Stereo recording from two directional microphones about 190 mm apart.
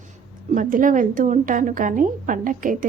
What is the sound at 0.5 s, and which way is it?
A woman's voice, 45° right (ahead or behind).